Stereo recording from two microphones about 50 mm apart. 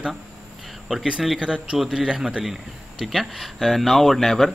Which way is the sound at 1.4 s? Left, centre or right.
Centre.